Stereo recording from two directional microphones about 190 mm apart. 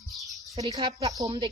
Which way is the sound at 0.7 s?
20° right (ahead or behind).